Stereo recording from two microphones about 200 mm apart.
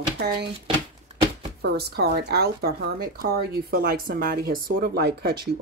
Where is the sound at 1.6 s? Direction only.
55° right (ahead or behind).